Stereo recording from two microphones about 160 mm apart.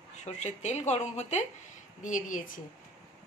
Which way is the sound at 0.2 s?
45° left (ahead or behind).